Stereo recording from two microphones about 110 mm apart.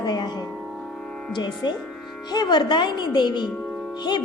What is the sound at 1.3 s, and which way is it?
A woman's voice, 40° left (ahead or behind).